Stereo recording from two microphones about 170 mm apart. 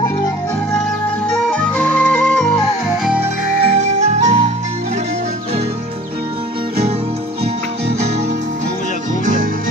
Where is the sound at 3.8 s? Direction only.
45° right (ahead or behind).